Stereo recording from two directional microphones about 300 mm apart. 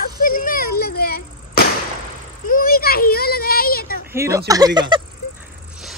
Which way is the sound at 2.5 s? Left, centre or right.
Left.